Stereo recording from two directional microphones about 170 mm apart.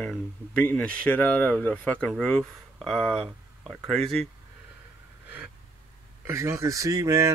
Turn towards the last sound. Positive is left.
turn(degrees=-20)  # may be behind; listen again after turning